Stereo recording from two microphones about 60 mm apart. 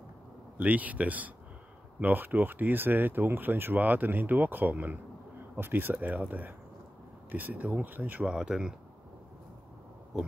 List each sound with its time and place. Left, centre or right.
0.6 s speech: right
8.3 s speech: centre